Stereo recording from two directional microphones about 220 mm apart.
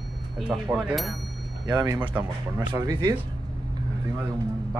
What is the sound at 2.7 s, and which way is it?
Speech, 20° right (ahead or behind).